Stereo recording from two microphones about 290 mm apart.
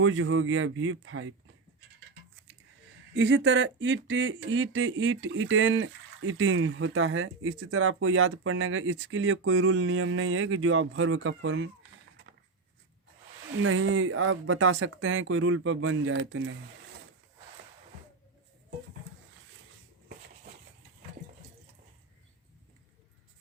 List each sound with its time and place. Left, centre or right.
0.0 s speech: right
3.2 s speech: right
13.6 s speech: right